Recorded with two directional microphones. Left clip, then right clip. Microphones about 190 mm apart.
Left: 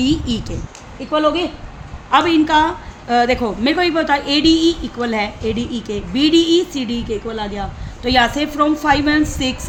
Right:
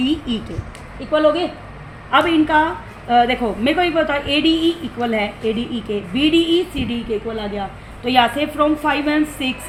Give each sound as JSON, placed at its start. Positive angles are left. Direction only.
{"t": 0.0, "sound": "a woman's voice", "side_deg": 60}
{"t": 2.0, "sound": "a woman's voice", "side_deg": 60}